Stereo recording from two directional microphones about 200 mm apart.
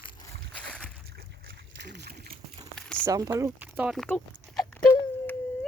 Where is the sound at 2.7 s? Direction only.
5° left (ahead or behind).